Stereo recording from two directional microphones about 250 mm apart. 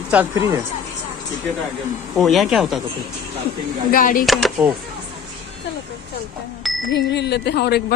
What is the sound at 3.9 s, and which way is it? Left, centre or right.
Speech, left.